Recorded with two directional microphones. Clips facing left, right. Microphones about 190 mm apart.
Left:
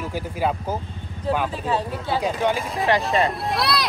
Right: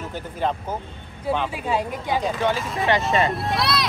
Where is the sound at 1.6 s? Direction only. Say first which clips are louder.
Even; 10° right (ahead or behind).